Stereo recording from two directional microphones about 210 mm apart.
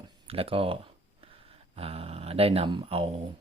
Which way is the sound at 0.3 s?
25° right (ahead or behind).